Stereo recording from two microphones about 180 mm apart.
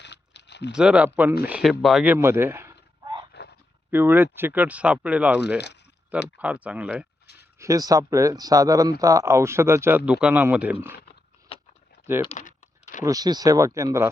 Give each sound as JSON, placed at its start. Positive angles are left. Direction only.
{"t": 0.0, "sound": "a sound", "side_deg": 75}
{"t": 0.7, "sound": "speech", "side_deg": -5}
{"t": 2.1, "sound": "a sound", "side_deg": -15}
{"t": 3.9, "sound": "speech", "side_deg": -10}
{"t": 7.6, "sound": "speech", "side_deg": -20}
{"t": 12.4, "sound": "typing", "side_deg": 45}
{"t": 13.1, "sound": "speech", "side_deg": -20}